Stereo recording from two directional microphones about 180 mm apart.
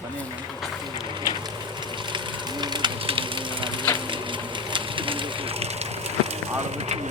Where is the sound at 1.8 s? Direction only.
25° right (ahead or behind).